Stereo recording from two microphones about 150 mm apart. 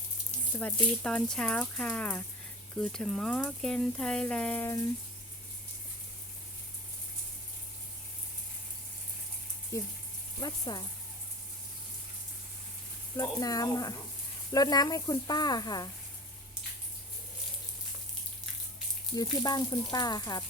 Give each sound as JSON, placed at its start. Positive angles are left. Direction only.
{"t": 0.5, "sound": "speech", "side_deg": 5}
{"t": 9.7, "sound": "speech", "side_deg": 20}
{"t": 13.1, "sound": "speech", "side_deg": 25}
{"t": 19.1, "sound": "speech", "side_deg": 25}